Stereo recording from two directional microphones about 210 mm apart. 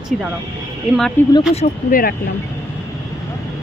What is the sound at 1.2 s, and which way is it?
Speech, 10° left (ahead or behind).